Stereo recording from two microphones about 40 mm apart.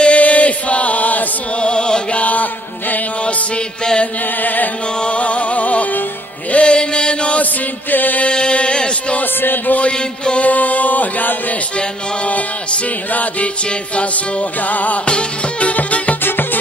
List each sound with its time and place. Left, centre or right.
0.0 s chant: left
1.6 s music: left
4.4 s music: left
5.0 s music: left
6.5 s chant: left
7.9 s mantra: left
8.3 s mantra: left
9.4 s music: left
9.8 s music: left
10.5 s chant: left
13.1 s music: left
14.7 s music: left
15.0 s music: left
15.7 s music: left